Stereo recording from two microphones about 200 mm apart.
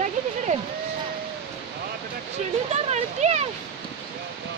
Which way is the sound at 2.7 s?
35° right (ahead or behind).